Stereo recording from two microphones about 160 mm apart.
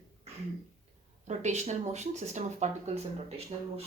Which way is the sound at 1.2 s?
45° right (ahead or behind).